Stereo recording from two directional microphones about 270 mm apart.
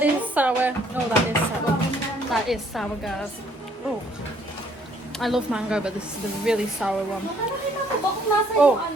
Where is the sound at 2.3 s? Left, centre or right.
Centre.